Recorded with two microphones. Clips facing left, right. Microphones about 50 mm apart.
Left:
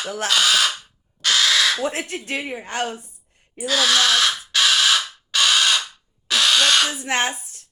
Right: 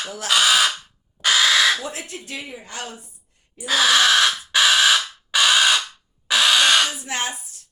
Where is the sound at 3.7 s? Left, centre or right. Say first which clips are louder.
Right 2 dB; centre.